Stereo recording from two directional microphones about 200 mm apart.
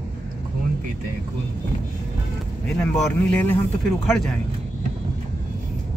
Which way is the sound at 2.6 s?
5° left (ahead or behind).